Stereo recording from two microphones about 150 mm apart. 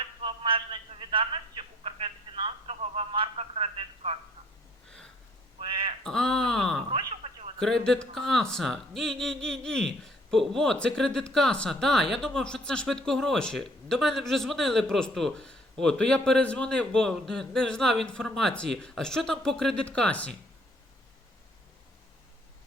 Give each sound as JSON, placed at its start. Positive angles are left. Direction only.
{"t": 0.2, "sound": "telephone", "side_deg": -35}
{"t": 5.5, "sound": "a sound", "side_deg": -35}
{"t": 6.0, "sound": "speech", "side_deg": 5}